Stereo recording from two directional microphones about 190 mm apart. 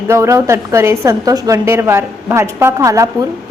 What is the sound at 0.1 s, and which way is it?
A woman's voice, 15° right (ahead or behind).